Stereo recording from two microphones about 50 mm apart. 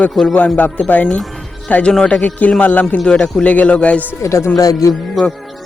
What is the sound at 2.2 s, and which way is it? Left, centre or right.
Speech, left.